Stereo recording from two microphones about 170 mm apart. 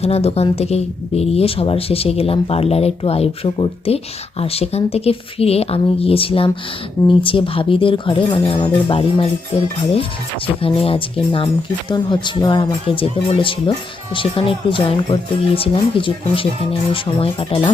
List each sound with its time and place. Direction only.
0.0 s speech: 35° left (ahead or behind)